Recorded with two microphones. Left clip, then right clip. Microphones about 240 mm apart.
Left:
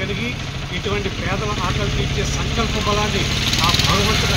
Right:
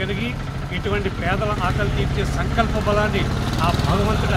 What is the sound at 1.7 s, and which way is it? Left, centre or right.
Speech, right.